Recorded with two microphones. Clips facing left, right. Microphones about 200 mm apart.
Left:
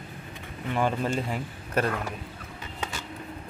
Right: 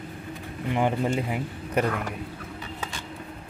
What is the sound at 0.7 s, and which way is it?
Speech, 15° right (ahead or behind).